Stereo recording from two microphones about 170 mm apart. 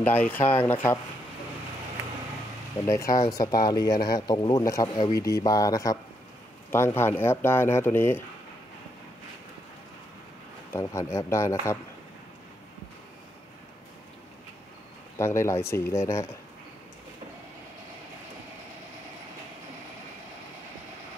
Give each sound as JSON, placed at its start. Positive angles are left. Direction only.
{"t": 0.0, "sound": "speech", "side_deg": 10}
{"t": 2.9, "sound": "speech", "side_deg": 20}
{"t": 10.7, "sound": "speech", "side_deg": 15}
{"t": 15.1, "sound": "speech", "side_deg": 15}